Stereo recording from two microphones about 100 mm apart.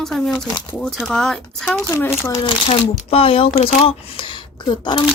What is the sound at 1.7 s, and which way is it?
Speech, 25° left (ahead or behind).